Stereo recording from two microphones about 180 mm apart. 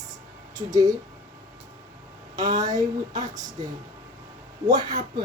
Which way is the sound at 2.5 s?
20° right (ahead or behind).